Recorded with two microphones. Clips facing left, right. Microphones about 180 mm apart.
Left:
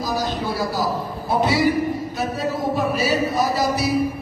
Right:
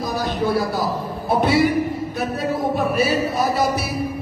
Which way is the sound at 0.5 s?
55° right (ahead or behind).